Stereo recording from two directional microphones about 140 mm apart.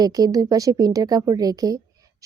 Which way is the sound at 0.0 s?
25° right (ahead or behind).